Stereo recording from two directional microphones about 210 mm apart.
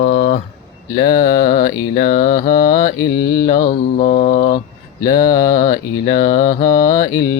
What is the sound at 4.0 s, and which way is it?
Mantra, 35° left (ahead or behind).